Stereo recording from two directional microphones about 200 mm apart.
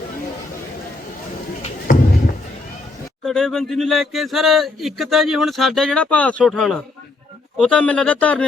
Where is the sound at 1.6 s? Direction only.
45° left (ahead or behind).